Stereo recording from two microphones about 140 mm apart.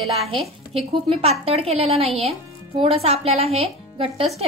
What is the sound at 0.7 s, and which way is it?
A woman's voice, 45° right (ahead or behind).